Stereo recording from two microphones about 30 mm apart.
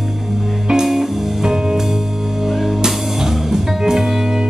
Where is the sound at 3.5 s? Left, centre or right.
Centre.